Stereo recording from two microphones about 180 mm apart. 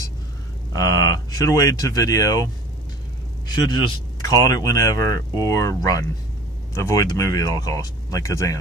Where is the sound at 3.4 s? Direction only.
25° left (ahead or behind).